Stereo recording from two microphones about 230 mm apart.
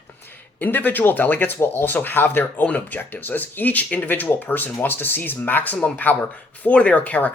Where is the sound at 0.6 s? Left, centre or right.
Centre.